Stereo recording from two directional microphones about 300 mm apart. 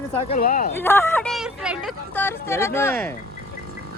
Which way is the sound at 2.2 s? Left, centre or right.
Centre.